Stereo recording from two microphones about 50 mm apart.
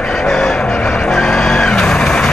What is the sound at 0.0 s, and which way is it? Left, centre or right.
Vehicle, centre.